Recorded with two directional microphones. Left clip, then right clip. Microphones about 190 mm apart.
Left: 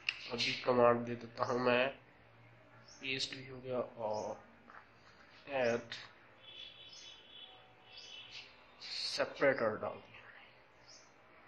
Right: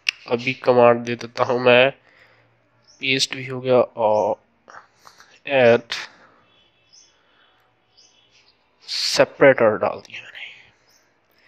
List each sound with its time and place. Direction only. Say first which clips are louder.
0.0 s speech: right 15 dB; 50° right (ahead or behind)
3.0 s speech: right 18 dB; 55° right (ahead or behind)
8.9 s speech: right 19 dB; 55° right (ahead or behind)